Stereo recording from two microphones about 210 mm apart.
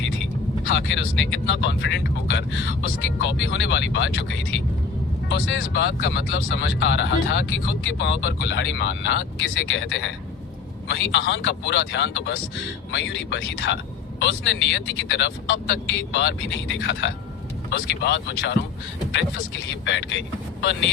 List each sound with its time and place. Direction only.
0.7 s speech: 60° left (ahead or behind)
19.8 s speech: 60° left (ahead or behind)